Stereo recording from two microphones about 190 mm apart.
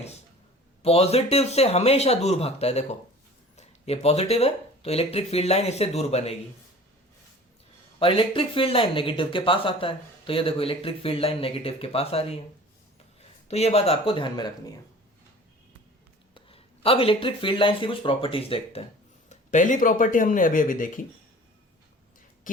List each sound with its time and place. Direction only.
0.8 s speech: 35° left (ahead or behind)
7.9 s speech: 25° left (ahead or behind)
13.5 s speech: 30° left (ahead or behind)
16.3 s speech: 30° left (ahead or behind); by 21.0 s 45° left (ahead or behind)